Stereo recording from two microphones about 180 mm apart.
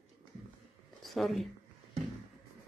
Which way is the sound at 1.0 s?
Centre (ahead or behind).